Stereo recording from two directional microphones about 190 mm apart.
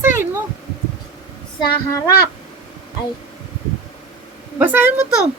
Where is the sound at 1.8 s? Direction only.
15° left (ahead or behind).